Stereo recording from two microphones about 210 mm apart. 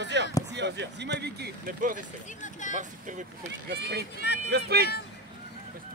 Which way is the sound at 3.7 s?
50° right (ahead or behind).